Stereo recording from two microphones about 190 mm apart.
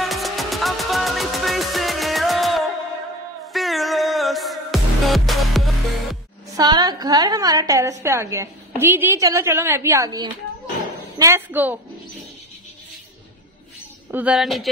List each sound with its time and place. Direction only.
0.0 s music: centre (ahead or behind)
6.5 s a woman's voice: 20° right (ahead or behind)
14.1 s speech: 5° right (ahead or behind)